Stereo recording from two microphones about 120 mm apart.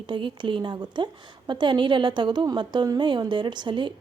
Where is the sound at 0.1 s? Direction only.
45° right (ahead or behind).